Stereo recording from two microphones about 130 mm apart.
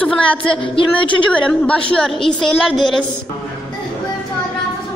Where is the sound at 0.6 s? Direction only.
40° left (ahead or behind).